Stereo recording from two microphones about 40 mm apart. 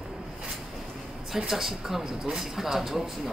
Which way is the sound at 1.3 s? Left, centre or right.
Centre.